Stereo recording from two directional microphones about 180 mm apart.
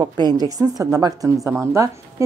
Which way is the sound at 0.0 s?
20° right (ahead or behind).